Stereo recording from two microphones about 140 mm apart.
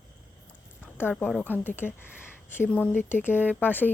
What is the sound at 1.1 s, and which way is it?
Speech, 5° left (ahead or behind).